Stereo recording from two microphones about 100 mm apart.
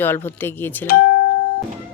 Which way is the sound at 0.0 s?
20° left (ahead or behind).